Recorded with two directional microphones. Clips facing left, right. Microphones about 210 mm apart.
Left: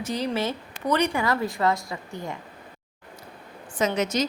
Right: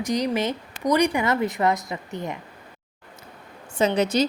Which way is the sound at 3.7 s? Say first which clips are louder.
Right 4 dB; 30° right (ahead or behind).